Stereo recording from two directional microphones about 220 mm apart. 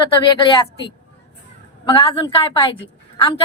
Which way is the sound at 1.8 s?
20° left (ahead or behind).